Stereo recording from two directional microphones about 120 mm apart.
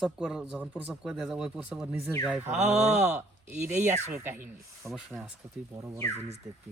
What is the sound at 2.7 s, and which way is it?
Speech, 70° right (ahead or behind).